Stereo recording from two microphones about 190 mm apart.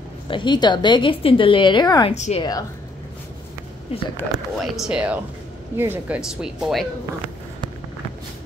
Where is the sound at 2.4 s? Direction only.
20° left (ahead or behind).